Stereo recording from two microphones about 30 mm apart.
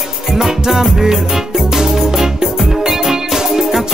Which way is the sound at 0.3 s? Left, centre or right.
Centre.